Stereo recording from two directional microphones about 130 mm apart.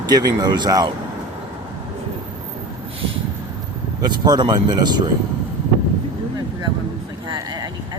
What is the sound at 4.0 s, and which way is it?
Speech, 35° right (ahead or behind).